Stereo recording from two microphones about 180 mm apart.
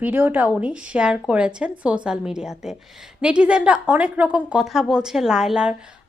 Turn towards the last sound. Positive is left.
turn(degrees=-5)  # may be behind; listen again after turning